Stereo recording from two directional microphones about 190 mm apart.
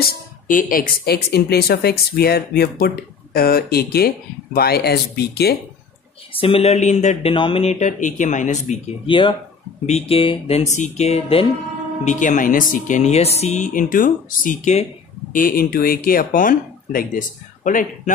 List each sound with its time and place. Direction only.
0.0 s speech: 45° left (ahead or behind)
6.3 s speech: 30° left (ahead or behind)
9.0 s speech: 25° left (ahead or behind)
15.3 s speech: 50° left (ahead or behind)